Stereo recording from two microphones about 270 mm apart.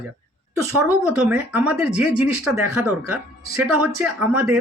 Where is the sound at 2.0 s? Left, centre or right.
Right.